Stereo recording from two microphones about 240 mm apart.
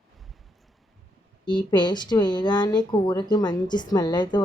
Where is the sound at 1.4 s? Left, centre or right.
Centre.